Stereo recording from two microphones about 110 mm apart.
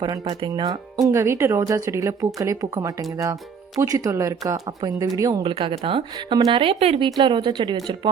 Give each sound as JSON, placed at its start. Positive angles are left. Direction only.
{"t": 0.3, "sound": "speech", "side_deg": -45}
{"t": 5.4, "sound": "speech", "side_deg": -55}
{"t": 6.1, "sound": "speech", "side_deg": -40}